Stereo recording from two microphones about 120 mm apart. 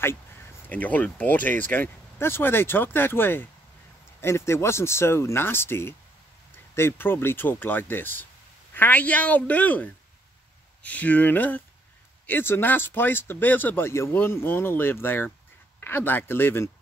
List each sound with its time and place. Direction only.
0.7 s speech: 15° left (ahead or behind)